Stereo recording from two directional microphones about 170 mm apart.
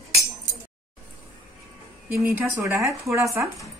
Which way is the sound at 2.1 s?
15° right (ahead or behind).